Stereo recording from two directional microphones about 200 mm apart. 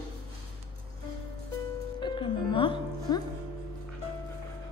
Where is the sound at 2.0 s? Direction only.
25° left (ahead or behind).